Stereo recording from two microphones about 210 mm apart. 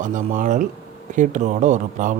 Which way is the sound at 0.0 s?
35° right (ahead or behind).